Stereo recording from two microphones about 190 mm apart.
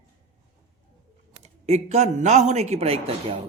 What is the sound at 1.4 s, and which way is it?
A woman's voice, 35° right (ahead or behind).